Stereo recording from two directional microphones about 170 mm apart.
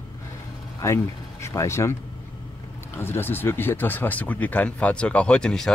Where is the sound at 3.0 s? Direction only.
15° left (ahead or behind).